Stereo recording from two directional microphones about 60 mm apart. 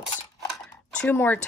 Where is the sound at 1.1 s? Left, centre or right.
Left.